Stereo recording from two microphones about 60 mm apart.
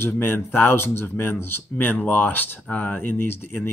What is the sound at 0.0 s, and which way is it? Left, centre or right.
Speech, left.